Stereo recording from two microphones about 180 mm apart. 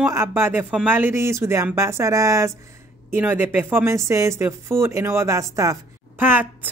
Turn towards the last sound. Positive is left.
turn(degrees=-10)  # may be behind; listen again after turning